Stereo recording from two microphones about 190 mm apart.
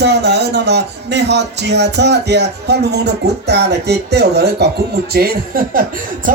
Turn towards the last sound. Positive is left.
turn(degrees=-50)  # may be behind; listen again after turning